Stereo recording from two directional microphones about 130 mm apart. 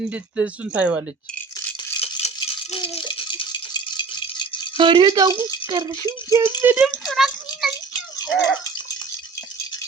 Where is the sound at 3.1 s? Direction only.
40° left (ahead or behind).